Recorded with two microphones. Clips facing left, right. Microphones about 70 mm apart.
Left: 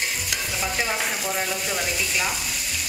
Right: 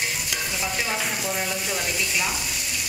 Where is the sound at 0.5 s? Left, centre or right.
Centre.